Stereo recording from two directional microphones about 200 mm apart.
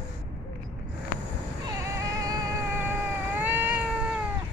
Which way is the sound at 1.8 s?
15° right (ahead or behind).